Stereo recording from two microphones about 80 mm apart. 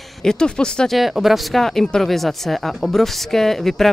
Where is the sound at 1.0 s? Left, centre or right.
Centre.